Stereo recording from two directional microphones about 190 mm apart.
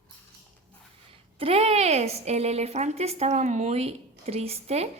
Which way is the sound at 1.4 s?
30° right (ahead or behind).